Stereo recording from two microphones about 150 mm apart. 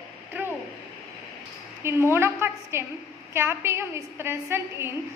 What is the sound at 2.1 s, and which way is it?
A woman's voice, 15° right (ahead or behind).